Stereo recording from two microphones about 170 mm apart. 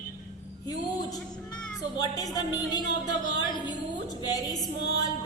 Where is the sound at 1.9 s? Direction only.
20° left (ahead or behind).